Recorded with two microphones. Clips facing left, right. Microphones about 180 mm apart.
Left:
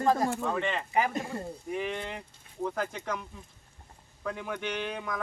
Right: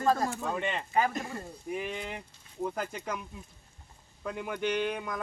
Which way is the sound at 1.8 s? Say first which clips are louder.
Left 2 dB; 5° right (ahead or behind).